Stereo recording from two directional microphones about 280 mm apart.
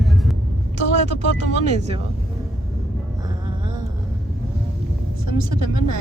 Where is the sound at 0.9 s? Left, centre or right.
Right.